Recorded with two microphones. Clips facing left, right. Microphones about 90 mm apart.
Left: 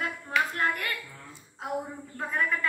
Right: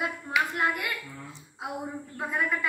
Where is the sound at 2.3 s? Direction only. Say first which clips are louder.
Even; 10° right (ahead or behind).